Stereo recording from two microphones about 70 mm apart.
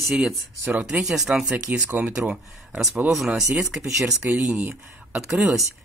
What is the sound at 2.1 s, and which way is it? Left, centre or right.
Speech, centre.